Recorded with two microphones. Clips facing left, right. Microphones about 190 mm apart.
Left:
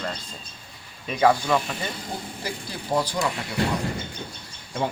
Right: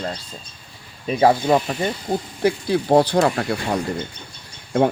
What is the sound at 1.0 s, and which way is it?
Speech, 40° right (ahead or behind).